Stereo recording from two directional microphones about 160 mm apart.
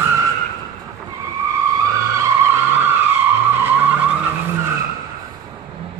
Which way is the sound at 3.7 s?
10° right (ahead or behind).